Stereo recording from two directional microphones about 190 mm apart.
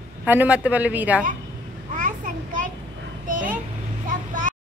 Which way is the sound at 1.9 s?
45° right (ahead or behind).